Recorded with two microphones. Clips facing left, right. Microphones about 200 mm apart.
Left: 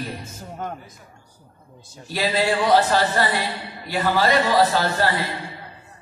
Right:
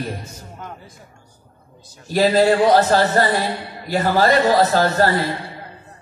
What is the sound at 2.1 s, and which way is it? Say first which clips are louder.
A man's voice: right 7 dB; 45° right (ahead or behind).